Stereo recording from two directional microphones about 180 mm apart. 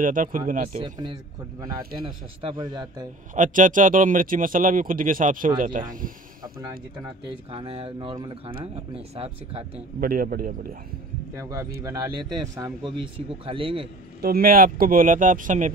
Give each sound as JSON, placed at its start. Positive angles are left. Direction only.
{"t": 0.0, "sound": "speech", "side_deg": -50}
{"t": 0.8, "sound": "speech", "side_deg": -25}
{"t": 2.7, "sound": "speech", "side_deg": -25}
{"t": 3.3, "sound": "speech", "side_deg": -45}
{"t": 7.5, "sound": "speech", "side_deg": -30}
{"t": 9.9, "sound": "speech", "side_deg": -55}
{"t": 11.8, "sound": "speech", "side_deg": -20}
{"t": 14.2, "sound": "speech", "side_deg": -55}